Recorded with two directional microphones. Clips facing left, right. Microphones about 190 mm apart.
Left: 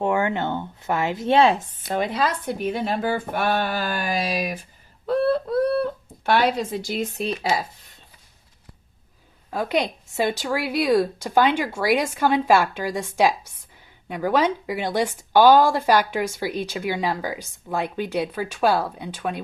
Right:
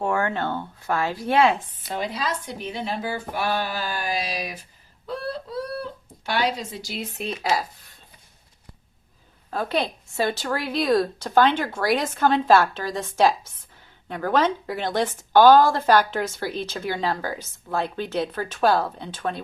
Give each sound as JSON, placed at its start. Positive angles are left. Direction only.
{"t": 0.0, "sound": "speech", "side_deg": 20}
{"t": 1.8, "sound": "speech", "side_deg": 50}
{"t": 5.0, "sound": "a sound", "side_deg": 55}
{"t": 9.5, "sound": "a woman's voice", "side_deg": 10}